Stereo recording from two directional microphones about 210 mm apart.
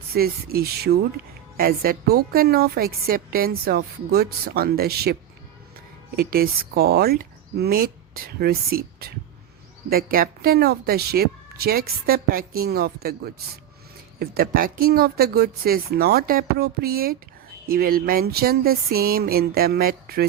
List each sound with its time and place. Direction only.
0.1 s a woman's voice: 45° right (ahead or behind)
6.1 s a woman's voice: 45° right (ahead or behind)